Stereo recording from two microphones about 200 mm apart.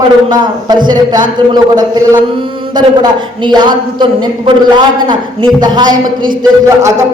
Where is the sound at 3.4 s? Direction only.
20° right (ahead or behind).